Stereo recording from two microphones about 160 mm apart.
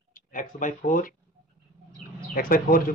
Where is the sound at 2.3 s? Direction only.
60° left (ahead or behind).